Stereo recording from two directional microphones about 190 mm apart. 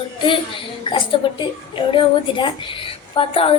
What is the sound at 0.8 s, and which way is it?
A woman's voice, 25° left (ahead or behind).